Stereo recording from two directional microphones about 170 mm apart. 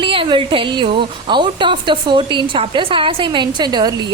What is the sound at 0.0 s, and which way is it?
A woman's voice, 30° right (ahead or behind).